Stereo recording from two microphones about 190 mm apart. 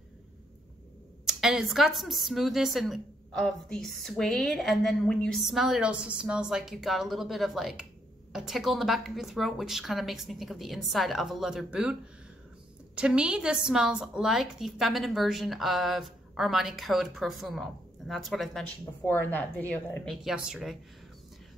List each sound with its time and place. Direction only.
1.2 s a woman's voice: centre (ahead or behind)